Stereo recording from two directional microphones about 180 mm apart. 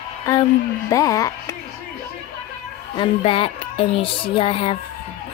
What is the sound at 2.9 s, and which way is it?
Speech, 30° left (ahead or behind).